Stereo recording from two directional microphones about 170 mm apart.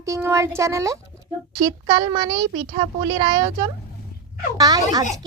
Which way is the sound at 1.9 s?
30° right (ahead or behind).